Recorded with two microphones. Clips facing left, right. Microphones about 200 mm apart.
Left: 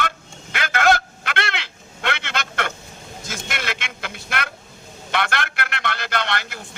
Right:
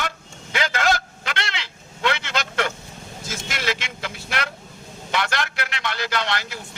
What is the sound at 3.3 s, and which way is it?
Vehicle, 55° left (ahead or behind).